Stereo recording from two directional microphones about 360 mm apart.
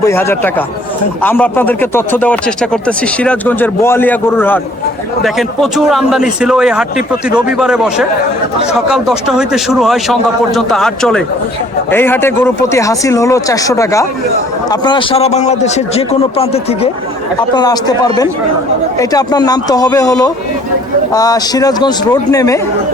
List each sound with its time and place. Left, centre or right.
0.0 s a man's voice: centre